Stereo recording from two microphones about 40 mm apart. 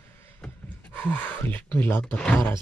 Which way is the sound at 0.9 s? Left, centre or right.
Left.